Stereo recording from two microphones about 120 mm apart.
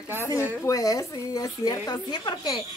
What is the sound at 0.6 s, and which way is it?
Speech, 30° left (ahead or behind).